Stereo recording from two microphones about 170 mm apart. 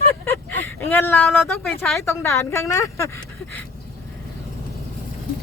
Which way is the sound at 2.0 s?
15° left (ahead or behind).